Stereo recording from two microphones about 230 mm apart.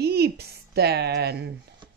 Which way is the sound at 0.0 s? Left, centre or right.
Right.